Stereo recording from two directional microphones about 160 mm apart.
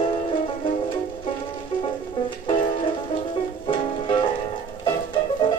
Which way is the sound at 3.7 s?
30° left (ahead or behind).